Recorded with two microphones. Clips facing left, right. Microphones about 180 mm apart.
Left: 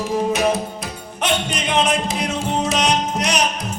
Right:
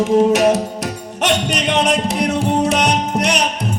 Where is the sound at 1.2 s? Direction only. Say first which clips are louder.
Right 4 dB; 70° right (ahead or behind).